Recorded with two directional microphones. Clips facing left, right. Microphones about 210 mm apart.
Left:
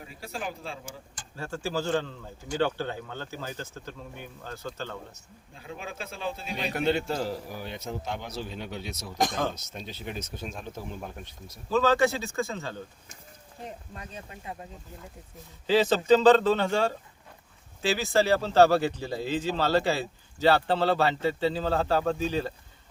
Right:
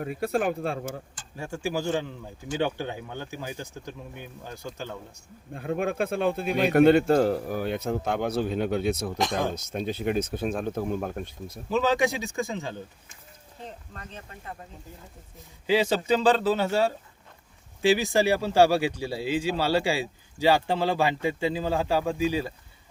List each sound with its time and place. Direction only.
0.0 s a man's voice: 60° right (ahead or behind)
1.4 s speech: 15° right (ahead or behind)
5.5 s a man's voice: 55° right (ahead or behind)
11.7 s speech: 15° right (ahead or behind)
13.7 s speech: 10° left (ahead or behind)
15.6 s speech: 10° right (ahead or behind)